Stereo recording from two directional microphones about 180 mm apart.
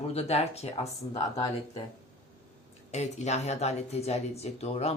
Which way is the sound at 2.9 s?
40° left (ahead or behind).